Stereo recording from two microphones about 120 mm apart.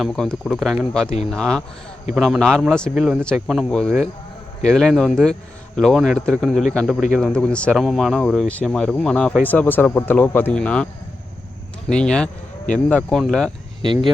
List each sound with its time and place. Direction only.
0.0 s speech: 5° left (ahead or behind)
3.2 s speech: 5° left (ahead or behind)
11.9 s speech: 5° left (ahead or behind)
13.8 s speech: 40° right (ahead or behind)